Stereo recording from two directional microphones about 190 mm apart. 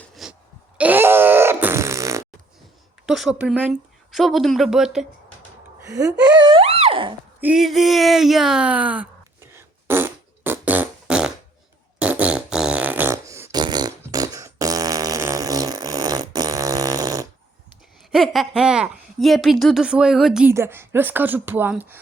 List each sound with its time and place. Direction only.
0.1 s a sound: centre (ahead or behind)
0.8 s groan: 10° right (ahead or behind)
3.1 s speech: centre (ahead or behind)
5.8 s speech: 15° right (ahead or behind)
6.3 s a sound: 25° right (ahead or behind)
7.4 s a sound: centre (ahead or behind)
11.9 s fart: 5° right (ahead or behind)
18.1 s speech: centre (ahead or behind)
20.5 s a woman's voice: 15° right (ahead or behind)